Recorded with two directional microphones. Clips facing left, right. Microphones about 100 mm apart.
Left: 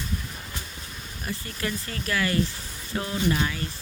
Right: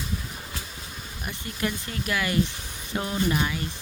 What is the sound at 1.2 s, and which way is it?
Speech, 20° right (ahead or behind).